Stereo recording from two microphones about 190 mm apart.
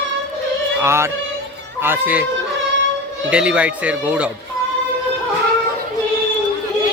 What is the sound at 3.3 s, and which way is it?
Speech, 5° right (ahead or behind).